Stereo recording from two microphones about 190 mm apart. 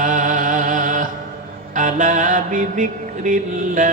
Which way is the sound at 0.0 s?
45° right (ahead or behind).